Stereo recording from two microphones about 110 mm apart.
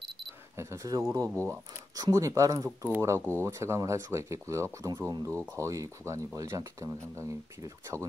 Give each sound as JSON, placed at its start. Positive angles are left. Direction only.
{"t": 0.6, "sound": "speech", "side_deg": -30}